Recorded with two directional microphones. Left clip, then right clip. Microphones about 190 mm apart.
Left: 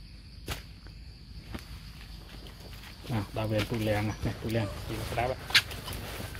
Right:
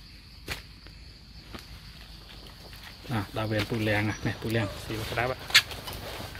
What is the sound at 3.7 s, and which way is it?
Speech, 35° right (ahead or behind).